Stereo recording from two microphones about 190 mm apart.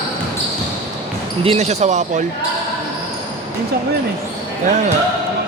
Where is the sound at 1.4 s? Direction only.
35° right (ahead or behind).